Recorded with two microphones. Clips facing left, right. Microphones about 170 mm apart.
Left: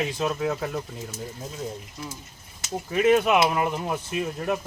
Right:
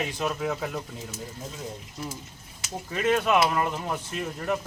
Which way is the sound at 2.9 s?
15° left (ahead or behind).